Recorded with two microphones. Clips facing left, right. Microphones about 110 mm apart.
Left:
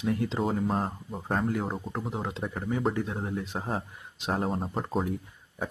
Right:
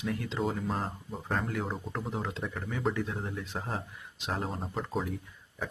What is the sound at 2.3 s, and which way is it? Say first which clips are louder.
Speech: left 5 dB; 20° left (ahead or behind).